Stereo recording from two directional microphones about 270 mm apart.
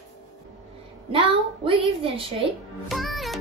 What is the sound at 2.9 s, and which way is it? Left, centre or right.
Music, centre.